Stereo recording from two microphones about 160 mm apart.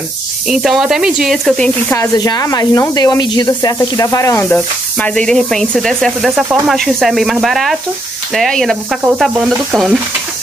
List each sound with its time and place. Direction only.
0.5 s speech: 5° right (ahead or behind)
1.9 s speech: 20° left (ahead or behind); by 8.7 s centre (ahead or behind)
9.0 s stir: 5° right (ahead or behind)